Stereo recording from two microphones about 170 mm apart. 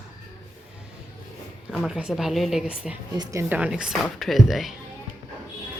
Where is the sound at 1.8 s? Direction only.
Centre (ahead or behind).